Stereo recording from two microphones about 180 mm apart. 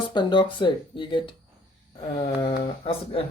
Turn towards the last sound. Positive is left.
turn(degrees=30)  # may be behind; listen again after turning